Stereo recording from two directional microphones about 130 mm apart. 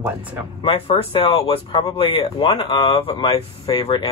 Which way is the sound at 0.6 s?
45° left (ahead or behind).